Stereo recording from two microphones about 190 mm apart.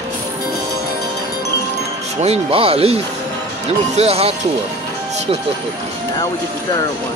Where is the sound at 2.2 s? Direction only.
30° right (ahead or behind).